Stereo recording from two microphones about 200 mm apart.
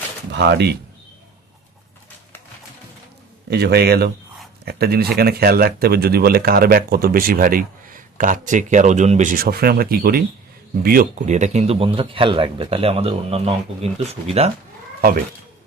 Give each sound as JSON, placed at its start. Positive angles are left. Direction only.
{"t": 0.3, "sound": "speech", "side_deg": -60}
{"t": 3.5, "sound": "a man's voice", "side_deg": -55}